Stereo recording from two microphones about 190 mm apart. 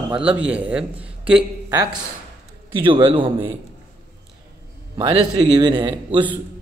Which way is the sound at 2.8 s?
25° right (ahead or behind).